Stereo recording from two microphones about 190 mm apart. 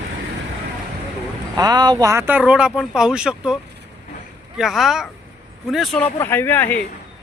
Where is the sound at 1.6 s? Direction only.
20° right (ahead or behind); by 6.8 s 10° left (ahead or behind).